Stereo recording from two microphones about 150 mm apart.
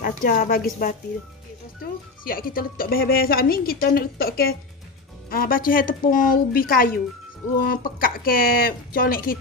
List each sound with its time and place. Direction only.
0.0 s speech: 70° left (ahead or behind); by 4.6 s 85° left
5.3 s speech: 75° left (ahead or behind)